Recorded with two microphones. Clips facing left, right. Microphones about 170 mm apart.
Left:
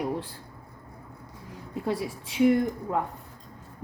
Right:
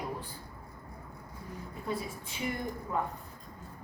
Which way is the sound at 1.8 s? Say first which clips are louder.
Left 6 dB; 80° left.